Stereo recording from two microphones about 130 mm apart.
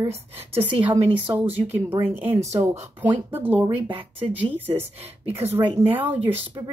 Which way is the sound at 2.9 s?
15° right (ahead or behind).